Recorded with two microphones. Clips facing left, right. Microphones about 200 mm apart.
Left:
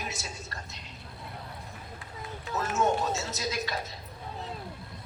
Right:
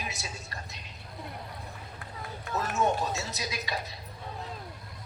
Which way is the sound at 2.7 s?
15° right (ahead or behind).